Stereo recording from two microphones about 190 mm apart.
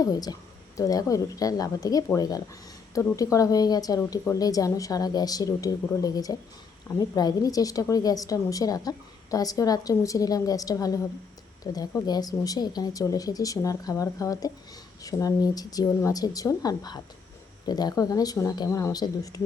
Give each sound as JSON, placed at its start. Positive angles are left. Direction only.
{"t": 0.0, "sound": "a woman's voice", "side_deg": 20}